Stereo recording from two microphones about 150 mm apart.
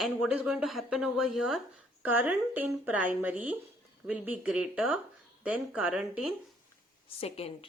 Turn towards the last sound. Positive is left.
turn(degrees=40)  # may be behind; listen again after turning